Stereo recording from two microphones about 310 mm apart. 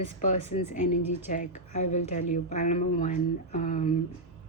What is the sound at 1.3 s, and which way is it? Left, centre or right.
Speech, left.